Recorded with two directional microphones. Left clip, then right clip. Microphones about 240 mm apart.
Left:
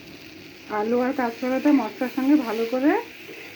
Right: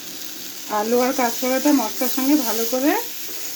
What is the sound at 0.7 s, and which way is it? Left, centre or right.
Speech, centre.